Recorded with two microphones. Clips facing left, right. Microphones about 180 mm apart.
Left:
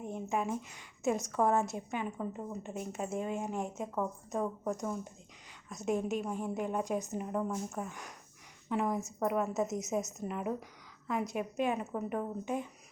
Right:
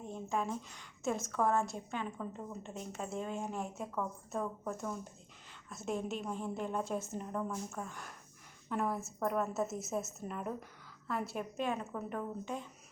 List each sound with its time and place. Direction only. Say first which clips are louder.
0.0 s a woman's voice: left 2 dB; 15° left (ahead or behind)
3.5 s a woman's voice: left 3 dB; 20° left (ahead or behind)